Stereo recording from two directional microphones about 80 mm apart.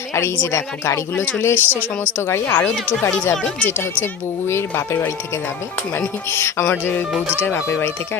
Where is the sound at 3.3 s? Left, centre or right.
Centre.